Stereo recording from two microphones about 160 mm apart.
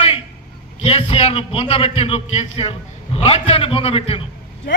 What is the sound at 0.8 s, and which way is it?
A man's voice, 40° left (ahead or behind).